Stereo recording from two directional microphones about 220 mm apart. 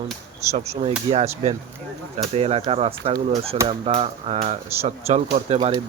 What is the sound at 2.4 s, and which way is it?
Speech, 25° right (ahead or behind).